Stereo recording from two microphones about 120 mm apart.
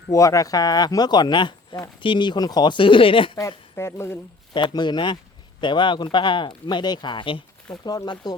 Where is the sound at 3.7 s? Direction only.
20° left (ahead or behind).